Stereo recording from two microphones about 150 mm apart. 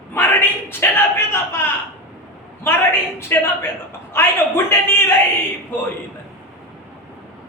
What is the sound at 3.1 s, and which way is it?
A man's voice, 15° left (ahead or behind).